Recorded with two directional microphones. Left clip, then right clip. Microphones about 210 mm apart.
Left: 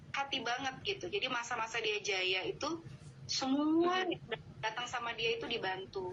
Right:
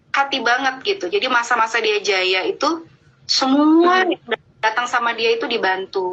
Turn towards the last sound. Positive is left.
turn(degrees=-45)  # may be behind; listen again after turning